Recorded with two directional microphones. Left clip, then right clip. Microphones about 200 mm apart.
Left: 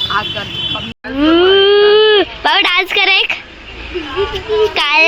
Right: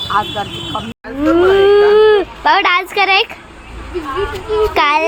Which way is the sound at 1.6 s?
15° left (ahead or behind).